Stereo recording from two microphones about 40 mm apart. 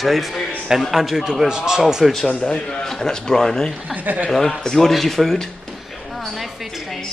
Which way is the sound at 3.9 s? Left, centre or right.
Right.